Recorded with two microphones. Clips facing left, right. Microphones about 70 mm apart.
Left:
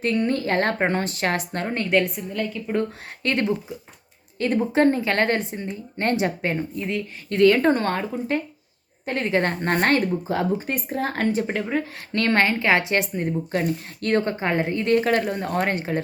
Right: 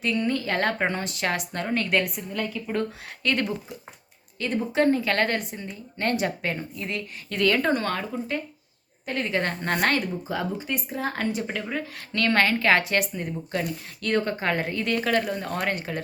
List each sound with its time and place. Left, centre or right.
0.0 s a woman's voice: left
2.1 s a woman's voice: centre
3.2 s a woman's voice: left
14.3 s a woman's voice: left